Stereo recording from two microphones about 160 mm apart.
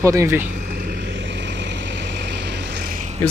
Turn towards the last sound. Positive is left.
turn(degrees=-45)  # may be behind; listen again after turning